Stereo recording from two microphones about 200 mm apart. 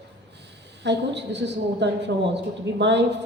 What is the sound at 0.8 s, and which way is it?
A woman's voice, 60° right (ahead or behind).